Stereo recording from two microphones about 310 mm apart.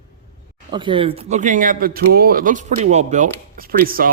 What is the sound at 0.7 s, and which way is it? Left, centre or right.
Speech, centre.